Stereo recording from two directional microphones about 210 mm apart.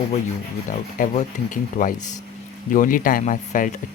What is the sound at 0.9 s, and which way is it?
Speech, 40° left (ahead or behind).